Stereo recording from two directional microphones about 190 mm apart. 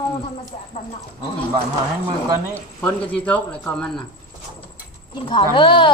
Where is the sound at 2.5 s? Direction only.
10° left (ahead or behind).